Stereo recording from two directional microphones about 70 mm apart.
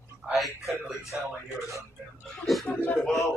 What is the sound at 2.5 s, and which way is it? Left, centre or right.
Chuckle, centre.